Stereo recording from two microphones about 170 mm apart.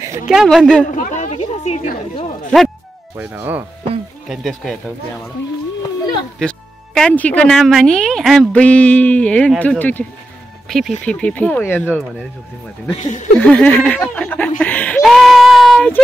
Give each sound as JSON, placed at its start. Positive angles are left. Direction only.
{"t": 0.3, "sound": "speech", "side_deg": -5}
{"t": 0.9, "sound": "speech", "side_deg": 45}
{"t": 3.2, "sound": "speech", "side_deg": -10}
{"t": 4.3, "sound": "speech", "side_deg": 0}
{"t": 6.4, "sound": "speech", "side_deg": 5}
{"t": 12.9, "sound": "speech", "side_deg": 45}
{"t": 13.4, "sound": "speech", "side_deg": 10}
{"t": 14.6, "sound": "a sound", "side_deg": 10}